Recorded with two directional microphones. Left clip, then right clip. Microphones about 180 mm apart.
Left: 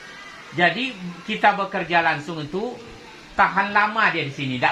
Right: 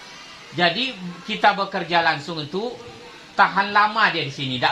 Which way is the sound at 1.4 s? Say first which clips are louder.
Even; 25° left (ahead or behind).